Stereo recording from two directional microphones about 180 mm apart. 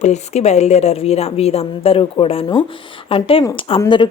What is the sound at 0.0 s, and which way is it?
A woman's voice, 40° left (ahead or behind).